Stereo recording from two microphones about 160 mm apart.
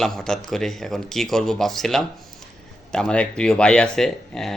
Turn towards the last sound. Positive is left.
turn(degrees=5)  # may be behind; listen again after turning